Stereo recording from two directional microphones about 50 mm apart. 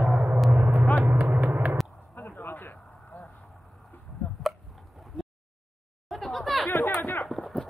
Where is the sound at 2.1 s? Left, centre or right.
Left.